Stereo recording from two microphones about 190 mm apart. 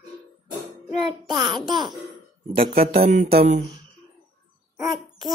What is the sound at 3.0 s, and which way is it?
Music, 40° right (ahead or behind).